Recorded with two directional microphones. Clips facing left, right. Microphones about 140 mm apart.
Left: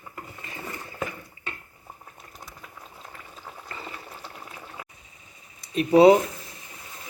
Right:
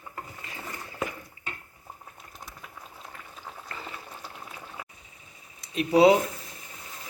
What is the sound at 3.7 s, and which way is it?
Boiling, centre (ahead or behind).